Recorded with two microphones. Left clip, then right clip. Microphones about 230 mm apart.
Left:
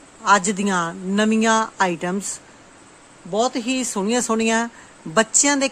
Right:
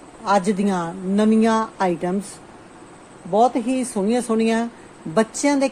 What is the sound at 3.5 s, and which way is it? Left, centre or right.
Speech, left.